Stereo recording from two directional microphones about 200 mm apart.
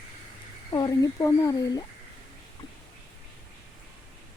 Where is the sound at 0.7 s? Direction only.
20° left (ahead or behind).